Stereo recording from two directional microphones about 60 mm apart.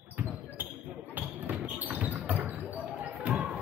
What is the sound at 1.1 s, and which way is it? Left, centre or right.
Basketball bounce, right.